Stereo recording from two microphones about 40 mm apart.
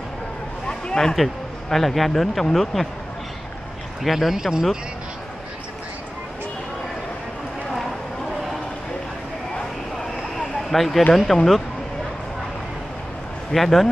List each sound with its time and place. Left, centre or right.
0.7 s a sound: centre
1.1 s speech: centre
4.0 s speech: centre
10.3 s a sound: centre
11.3 s speech: centre
13.5 s speech: centre